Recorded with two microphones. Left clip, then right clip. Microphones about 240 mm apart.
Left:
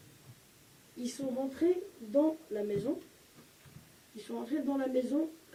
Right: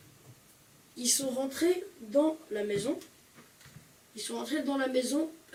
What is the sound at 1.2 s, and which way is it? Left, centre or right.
Speech, left.